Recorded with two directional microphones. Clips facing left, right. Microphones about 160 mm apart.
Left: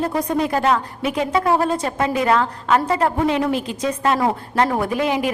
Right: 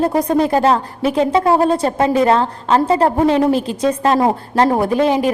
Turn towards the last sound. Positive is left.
turn(degrees=-30)  # may be behind; listen again after turning